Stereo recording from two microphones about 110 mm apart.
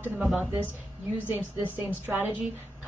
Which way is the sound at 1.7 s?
15° right (ahead or behind).